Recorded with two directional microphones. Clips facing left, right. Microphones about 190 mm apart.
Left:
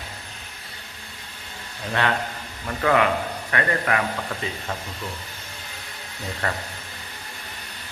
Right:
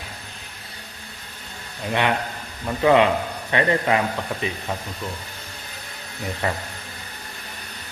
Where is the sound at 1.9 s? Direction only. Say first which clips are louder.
Right 2 dB; 15° right (ahead or behind).